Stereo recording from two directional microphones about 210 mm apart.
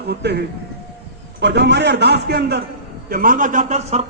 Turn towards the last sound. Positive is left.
turn(degrees=-35)  # may be behind; listen again after turning